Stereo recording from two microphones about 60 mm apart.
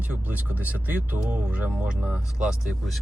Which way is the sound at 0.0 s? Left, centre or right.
Right.